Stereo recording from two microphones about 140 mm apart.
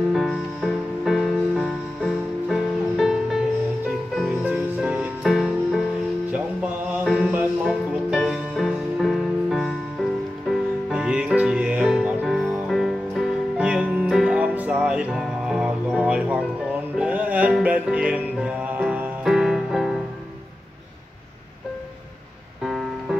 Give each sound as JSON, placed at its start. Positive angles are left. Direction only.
{"t": 0.1, "sound": "music", "side_deg": 0}
{"t": 7.1, "sound": "music", "side_deg": -5}
{"t": 22.7, "sound": "music", "side_deg": 0}